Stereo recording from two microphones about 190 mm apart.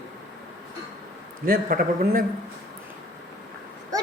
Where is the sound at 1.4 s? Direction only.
50° right (ahead or behind).